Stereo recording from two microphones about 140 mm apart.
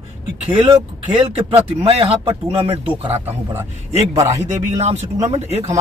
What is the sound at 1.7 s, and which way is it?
Speech, 40° right (ahead or behind).